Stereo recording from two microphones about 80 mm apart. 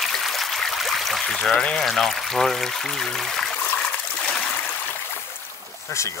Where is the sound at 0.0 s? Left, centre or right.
Centre.